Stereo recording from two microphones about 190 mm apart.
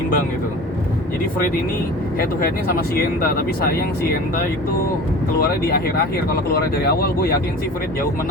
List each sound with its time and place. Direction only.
2.9 s speech: 55° left (ahead or behind)
5.4 s speech: 50° left (ahead or behind)